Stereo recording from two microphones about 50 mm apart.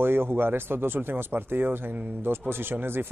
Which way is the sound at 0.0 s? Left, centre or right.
Right.